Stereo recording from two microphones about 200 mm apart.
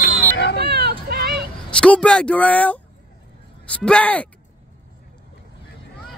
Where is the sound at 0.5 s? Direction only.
55° right (ahead or behind).